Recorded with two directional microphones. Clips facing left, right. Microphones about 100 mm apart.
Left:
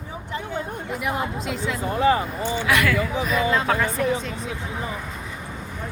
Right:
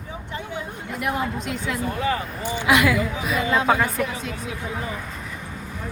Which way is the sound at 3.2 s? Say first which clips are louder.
Right 2 dB; 5° right (ahead or behind).